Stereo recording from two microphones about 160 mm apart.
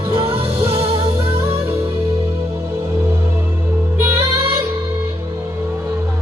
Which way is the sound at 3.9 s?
15° right (ahead or behind).